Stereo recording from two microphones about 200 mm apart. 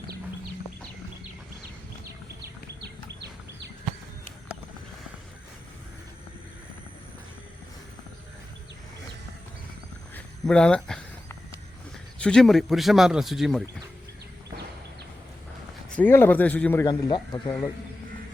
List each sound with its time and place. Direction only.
2.8 s bird: 55° right (ahead or behind)
10.2 s a sound: 5° left (ahead or behind)
12.2 s speech: 5° left (ahead or behind)
16.0 s speech: 10° left (ahead or behind)
16.8 s speech: 20° left (ahead or behind)